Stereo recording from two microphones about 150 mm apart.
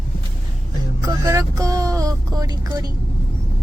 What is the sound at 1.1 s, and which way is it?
Speech, 25° right (ahead or behind).